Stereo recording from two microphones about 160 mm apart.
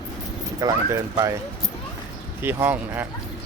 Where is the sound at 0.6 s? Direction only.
20° right (ahead or behind).